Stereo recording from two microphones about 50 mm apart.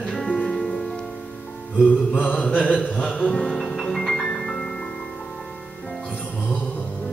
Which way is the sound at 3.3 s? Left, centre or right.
Centre.